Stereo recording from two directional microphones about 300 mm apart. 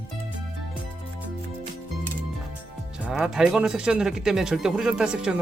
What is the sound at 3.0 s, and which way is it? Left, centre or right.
Speech, centre.